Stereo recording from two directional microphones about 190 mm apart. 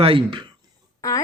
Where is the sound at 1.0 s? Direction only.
20° left (ahead or behind).